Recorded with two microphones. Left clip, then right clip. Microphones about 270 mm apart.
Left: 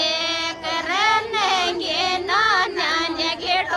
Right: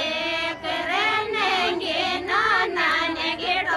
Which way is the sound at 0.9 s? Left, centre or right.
Centre.